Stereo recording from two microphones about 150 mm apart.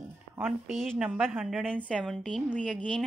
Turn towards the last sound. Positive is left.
turn(degrees=5)  # may be behind; listen again after turning